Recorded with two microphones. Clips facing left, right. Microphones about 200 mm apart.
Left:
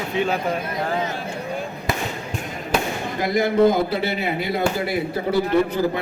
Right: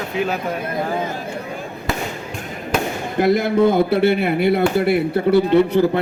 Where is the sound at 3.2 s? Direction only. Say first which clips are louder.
Right 2 dB; 60° right (ahead or behind).